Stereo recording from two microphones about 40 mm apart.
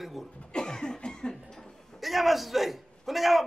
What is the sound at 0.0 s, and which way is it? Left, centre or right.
Cough, centre.